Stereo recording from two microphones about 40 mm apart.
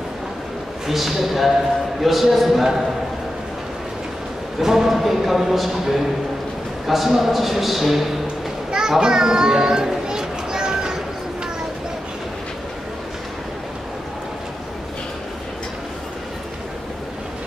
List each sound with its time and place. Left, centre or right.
0.8 s a man's voice: centre
4.6 s a man's voice: centre
8.7 s a child's voice: centre
10.0 s children playing: centre